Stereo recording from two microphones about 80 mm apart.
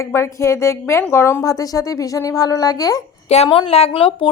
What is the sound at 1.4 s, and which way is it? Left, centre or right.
Speech, left.